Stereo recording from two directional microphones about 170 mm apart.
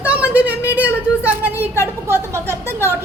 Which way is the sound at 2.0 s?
15° right (ahead or behind).